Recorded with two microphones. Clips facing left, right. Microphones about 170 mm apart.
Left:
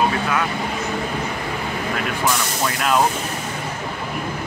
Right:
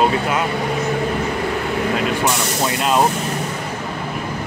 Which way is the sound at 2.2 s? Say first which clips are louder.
Right 2 dB; 20° right (ahead or behind).